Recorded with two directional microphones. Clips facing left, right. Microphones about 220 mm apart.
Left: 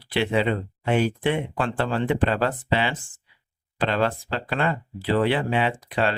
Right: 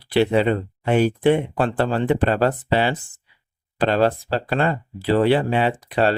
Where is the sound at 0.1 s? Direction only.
40° right (ahead or behind).